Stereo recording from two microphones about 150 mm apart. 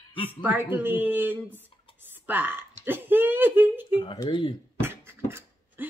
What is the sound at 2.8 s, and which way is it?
Speech, 15° right (ahead or behind).